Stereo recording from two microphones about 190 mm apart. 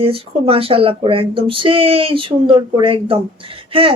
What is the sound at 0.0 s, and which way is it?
Speech, 30° right (ahead or behind).